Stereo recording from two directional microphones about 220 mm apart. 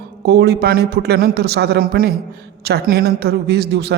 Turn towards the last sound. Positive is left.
turn(degrees=-50)  # may be behind; listen again after turning